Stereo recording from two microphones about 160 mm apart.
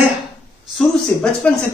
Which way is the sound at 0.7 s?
5° left (ahead or behind).